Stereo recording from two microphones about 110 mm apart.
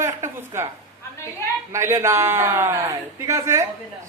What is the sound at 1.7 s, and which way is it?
A man's voice, 25° right (ahead or behind).